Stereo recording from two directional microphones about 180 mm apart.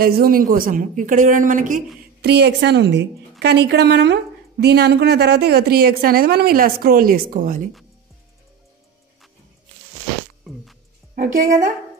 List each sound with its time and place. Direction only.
0.0 s speech: 55° right (ahead or behind)
2.2 s a woman's voice: 65° right (ahead or behind); by 7.6 s 50° right (ahead or behind)
10.4 s music: centre (ahead or behind)
11.1 s speech: 45° right (ahead or behind)